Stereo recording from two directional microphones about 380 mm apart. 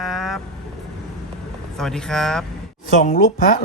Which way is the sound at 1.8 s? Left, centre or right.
Centre.